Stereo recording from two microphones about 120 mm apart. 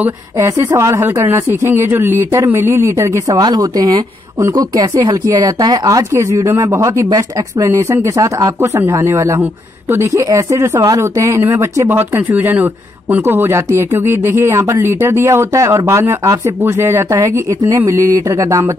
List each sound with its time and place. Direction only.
0.0 s a woman's voice: 20° right (ahead or behind)